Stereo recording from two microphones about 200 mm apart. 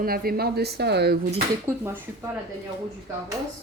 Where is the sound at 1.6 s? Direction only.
10° right (ahead or behind).